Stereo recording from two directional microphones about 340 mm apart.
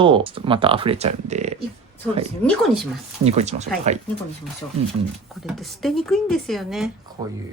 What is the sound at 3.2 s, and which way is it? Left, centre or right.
Speech, centre.